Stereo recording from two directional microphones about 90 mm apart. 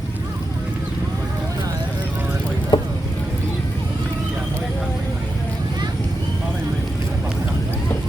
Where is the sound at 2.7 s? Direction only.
60° left (ahead or behind).